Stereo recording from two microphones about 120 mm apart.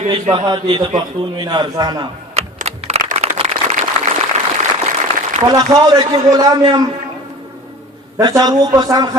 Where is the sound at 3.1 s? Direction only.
60° right (ahead or behind); by 4.1 s 80° right.